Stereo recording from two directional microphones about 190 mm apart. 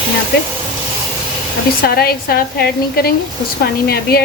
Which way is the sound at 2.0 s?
55° left (ahead or behind).